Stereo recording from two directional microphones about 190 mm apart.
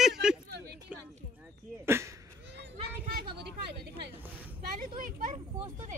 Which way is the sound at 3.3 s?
60° right (ahead or behind).